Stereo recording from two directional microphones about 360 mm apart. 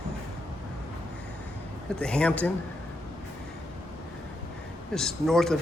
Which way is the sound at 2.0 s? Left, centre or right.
Centre.